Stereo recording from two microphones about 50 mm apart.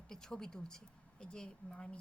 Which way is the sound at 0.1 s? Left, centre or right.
Centre.